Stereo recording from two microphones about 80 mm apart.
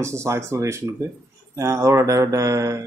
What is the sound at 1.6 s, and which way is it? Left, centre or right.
Mantra, right.